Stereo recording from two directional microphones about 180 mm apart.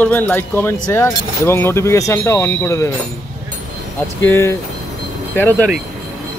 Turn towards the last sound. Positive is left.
turn(degrees=10)  # may be behind; listen again after turning